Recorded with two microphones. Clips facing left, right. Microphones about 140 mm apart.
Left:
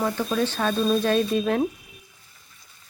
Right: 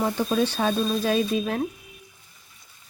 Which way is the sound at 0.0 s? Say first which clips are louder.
Right 1 dB; 15° right (ahead or behind).